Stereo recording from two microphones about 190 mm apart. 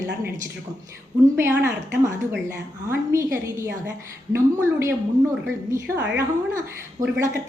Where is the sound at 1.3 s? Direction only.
15° right (ahead or behind).